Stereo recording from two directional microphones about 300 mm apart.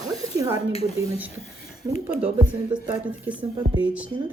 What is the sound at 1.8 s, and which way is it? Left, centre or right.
A woman's voice, centre.